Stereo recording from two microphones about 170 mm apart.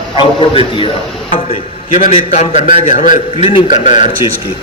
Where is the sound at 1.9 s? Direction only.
45° left (ahead or behind).